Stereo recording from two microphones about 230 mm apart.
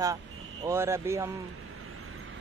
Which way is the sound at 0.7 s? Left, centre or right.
Centre.